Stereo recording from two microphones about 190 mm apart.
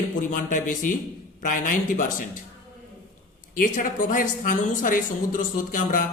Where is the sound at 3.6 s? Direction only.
45° left (ahead or behind).